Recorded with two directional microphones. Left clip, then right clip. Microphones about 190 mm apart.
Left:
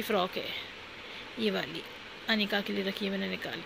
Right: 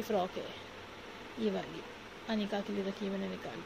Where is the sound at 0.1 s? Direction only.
20° left (ahead or behind).